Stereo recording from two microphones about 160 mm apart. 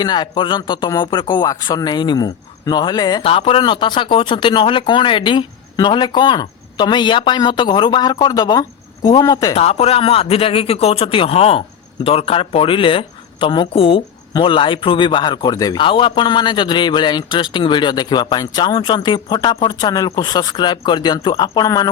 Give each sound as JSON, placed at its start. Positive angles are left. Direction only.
{"t": 0.0, "sound": "speech", "side_deg": 25}
{"t": 9.6, "sound": "speech", "side_deg": 40}